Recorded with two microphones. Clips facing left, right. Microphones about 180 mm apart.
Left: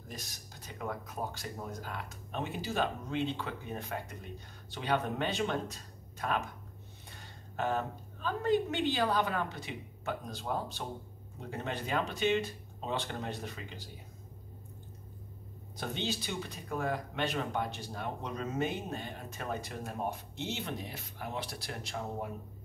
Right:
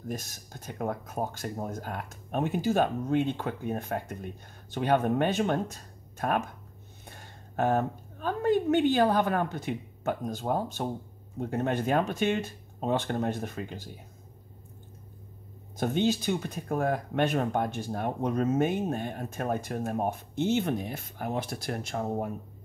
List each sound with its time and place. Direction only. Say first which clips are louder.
0.1 s a woman's voice: right 9 dB; 50° right (ahead or behind)
15.8 s speech: right 10 dB; 50° right (ahead or behind)